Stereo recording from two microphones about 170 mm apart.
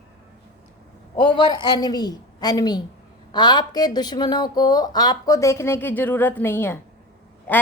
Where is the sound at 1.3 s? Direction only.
25° left (ahead or behind).